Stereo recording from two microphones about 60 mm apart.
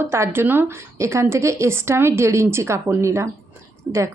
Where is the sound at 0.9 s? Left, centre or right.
Right.